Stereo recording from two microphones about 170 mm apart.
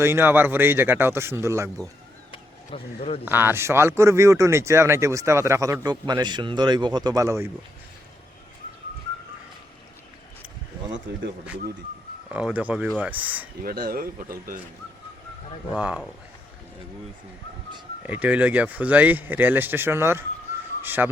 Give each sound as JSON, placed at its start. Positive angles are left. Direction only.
{"t": 0.0, "sound": "speech", "side_deg": -15}
{"t": 2.3, "sound": "a sound", "side_deg": 35}
{"t": 3.2, "sound": "speech", "side_deg": -10}
{"t": 12.3, "sound": "speech", "side_deg": -5}
{"t": 13.6, "sound": "speech", "side_deg": -60}
{"t": 15.7, "sound": "speech", "side_deg": -5}
{"t": 18.0, "sound": "speech", "side_deg": -10}